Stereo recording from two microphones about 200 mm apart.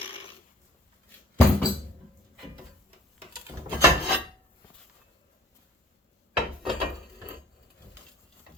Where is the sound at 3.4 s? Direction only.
10° right (ahead or behind).